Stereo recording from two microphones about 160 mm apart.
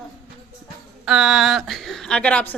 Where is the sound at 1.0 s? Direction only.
Centre (ahead or behind).